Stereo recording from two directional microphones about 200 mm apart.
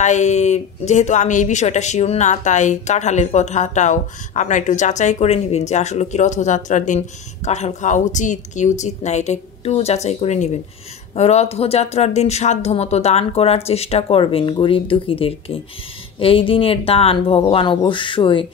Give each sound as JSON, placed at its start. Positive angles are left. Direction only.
{"t": 0.0, "sound": "speech", "side_deg": 35}